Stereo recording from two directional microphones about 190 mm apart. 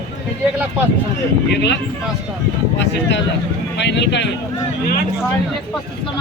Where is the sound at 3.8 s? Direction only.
65° left (ahead or behind).